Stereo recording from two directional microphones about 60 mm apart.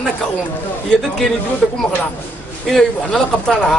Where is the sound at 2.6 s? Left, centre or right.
Centre.